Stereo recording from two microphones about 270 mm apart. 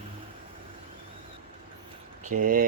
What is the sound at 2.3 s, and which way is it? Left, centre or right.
Speech, right.